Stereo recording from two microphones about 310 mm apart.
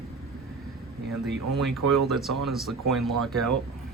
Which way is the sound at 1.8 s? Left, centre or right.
Right.